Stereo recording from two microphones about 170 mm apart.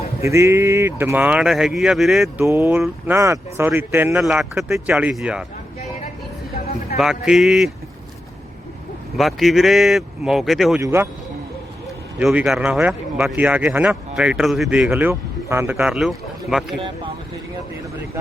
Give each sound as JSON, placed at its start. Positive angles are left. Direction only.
{"t": 0.2, "sound": "speech", "side_deg": -15}
{"t": 2.4, "sound": "a man's voice", "side_deg": -15}
{"t": 7.0, "sound": "a man's voice", "side_deg": -5}
{"t": 9.1, "sound": "a man's voice", "side_deg": 0}
{"t": 10.8, "sound": "speech", "side_deg": -15}
{"t": 12.2, "sound": "a man's voice", "side_deg": -5}